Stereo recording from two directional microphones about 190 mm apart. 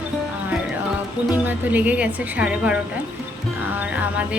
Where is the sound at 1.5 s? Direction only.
10° right (ahead or behind).